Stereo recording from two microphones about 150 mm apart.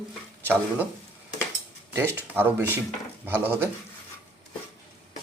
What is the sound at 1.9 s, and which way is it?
A man's voice, 15° right (ahead or behind).